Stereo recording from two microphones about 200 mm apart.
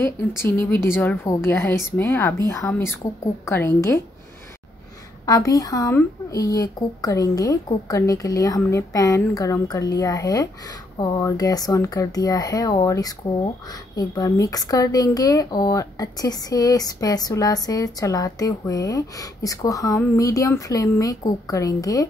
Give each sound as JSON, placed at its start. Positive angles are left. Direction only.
{"t": 0.7, "sound": "speech", "side_deg": 10}
{"t": 5.2, "sound": "speech", "side_deg": 15}